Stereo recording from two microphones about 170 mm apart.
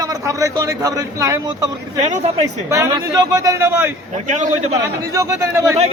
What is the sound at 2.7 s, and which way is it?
A man's voice, 15° right (ahead or behind).